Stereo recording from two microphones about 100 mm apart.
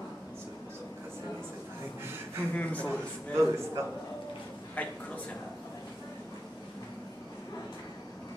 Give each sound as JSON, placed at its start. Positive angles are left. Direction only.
{"t": 2.5, "sound": "a man's voice", "side_deg": 15}
{"t": 3.3, "sound": "a man's voice", "side_deg": -25}
{"t": 4.8, "sound": "a man's voice", "side_deg": 15}